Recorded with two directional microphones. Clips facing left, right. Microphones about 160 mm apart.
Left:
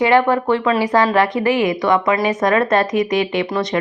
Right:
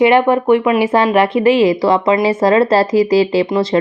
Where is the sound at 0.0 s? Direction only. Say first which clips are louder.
Right 3 dB; 20° right (ahead or behind).